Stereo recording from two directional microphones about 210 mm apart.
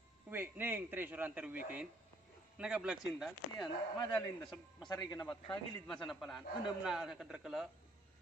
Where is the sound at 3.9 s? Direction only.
20° left (ahead or behind).